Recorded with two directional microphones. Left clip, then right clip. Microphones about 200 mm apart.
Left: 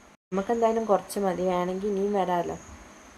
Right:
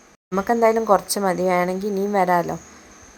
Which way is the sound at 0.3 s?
20° right (ahead or behind).